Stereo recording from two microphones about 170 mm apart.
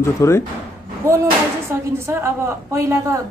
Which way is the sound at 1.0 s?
20° right (ahead or behind).